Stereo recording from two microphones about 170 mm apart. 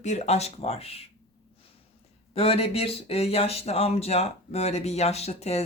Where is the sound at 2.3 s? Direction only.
35° left (ahead or behind).